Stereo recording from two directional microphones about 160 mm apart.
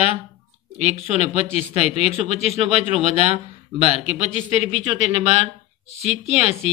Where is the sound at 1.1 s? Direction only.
40° left (ahead or behind).